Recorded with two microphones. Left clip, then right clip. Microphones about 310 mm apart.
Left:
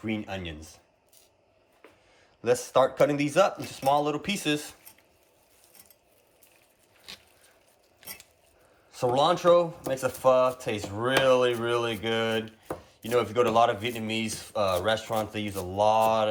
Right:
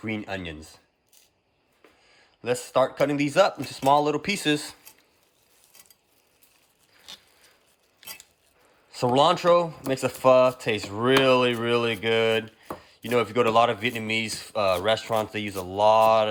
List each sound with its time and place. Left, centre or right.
0.0 s speech: centre
2.4 s speech: centre
8.9 s speech: centre